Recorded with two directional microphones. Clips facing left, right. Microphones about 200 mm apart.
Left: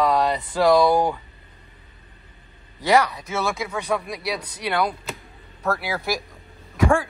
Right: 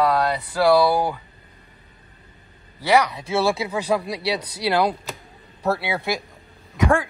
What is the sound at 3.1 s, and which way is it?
Speech, 30° right (ahead or behind).